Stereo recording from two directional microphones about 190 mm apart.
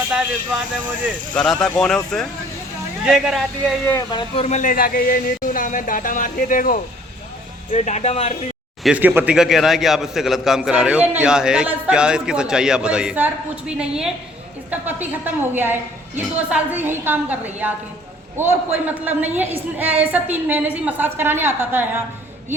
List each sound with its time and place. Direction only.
1.3 s a man's voice: 5° left (ahead or behind)
3.8 s speech: 20° left (ahead or behind)
4.4 s speech: 40° left (ahead or behind)
8.8 s a man's voice: 5° right (ahead or behind)